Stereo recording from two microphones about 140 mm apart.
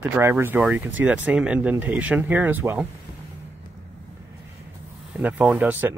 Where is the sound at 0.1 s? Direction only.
15° right (ahead or behind).